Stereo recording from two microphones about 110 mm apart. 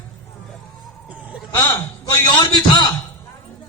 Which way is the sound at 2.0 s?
45° left (ahead or behind).